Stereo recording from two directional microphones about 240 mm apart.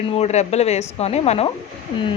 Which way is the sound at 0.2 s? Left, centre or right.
Left.